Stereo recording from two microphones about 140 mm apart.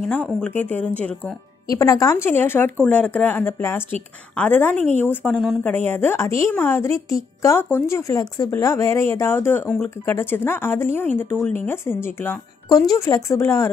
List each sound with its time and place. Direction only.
0.0 s speech: 10° left (ahead or behind)
1.7 s speech: 25° left (ahead or behind)
12.6 s speech: 25° left (ahead or behind)